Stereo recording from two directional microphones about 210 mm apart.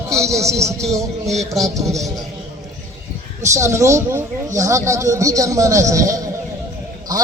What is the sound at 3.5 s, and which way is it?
Speech, 15° right (ahead or behind).